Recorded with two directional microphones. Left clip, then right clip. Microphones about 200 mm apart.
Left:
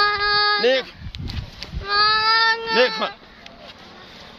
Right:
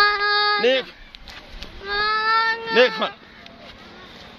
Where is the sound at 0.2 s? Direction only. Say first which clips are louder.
Left 1 dB; 10° left (ahead or behind).